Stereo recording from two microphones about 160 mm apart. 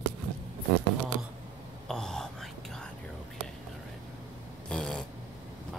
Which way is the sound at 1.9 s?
5° left (ahead or behind).